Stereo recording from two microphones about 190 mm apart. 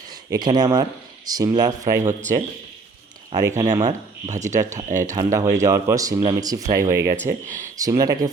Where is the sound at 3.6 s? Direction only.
20° right (ahead or behind).